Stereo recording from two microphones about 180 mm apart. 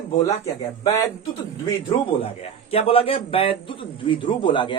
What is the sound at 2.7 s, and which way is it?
A man's voice, 30° left (ahead or behind).